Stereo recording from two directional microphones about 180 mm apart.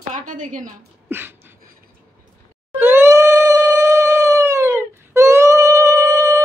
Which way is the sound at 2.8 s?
15° right (ahead or behind).